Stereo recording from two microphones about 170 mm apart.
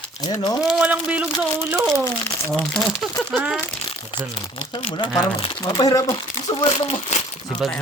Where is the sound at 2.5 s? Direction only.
Centre (ahead or behind).